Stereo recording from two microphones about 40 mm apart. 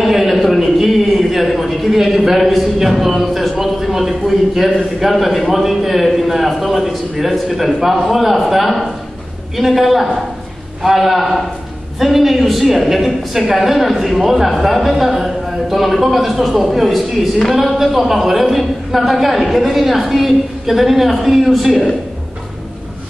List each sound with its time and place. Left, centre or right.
0.0 s a man's voice: centre